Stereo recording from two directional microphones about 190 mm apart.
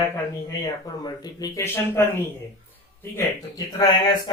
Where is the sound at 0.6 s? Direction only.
20° left (ahead or behind).